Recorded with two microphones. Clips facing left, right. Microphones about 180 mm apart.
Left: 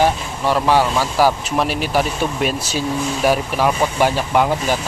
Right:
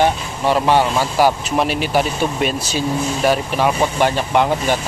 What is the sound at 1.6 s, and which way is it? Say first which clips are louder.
Speech: right 1 dB; centre (ahead or behind).